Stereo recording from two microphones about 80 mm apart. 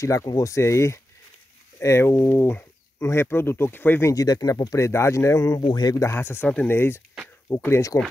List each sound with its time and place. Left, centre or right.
0.0 s speech: left
4.1 s speech: left
5.7 s speech: left
5.9 s speech: left